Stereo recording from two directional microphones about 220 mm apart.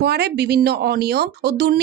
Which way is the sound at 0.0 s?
50° right (ahead or behind).